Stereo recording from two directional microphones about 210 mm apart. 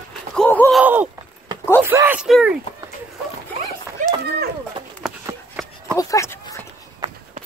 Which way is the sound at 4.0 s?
40° right (ahead or behind).